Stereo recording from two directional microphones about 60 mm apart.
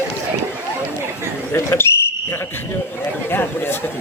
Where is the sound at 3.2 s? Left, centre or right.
Left.